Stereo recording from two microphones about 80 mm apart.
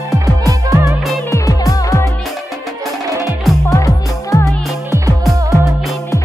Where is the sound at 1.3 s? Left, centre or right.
Left.